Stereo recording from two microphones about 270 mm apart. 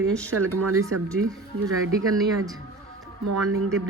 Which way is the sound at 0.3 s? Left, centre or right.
Right.